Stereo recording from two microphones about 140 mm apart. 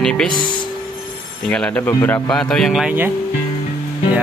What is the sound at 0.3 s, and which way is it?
Speech, 35° left (ahead or behind).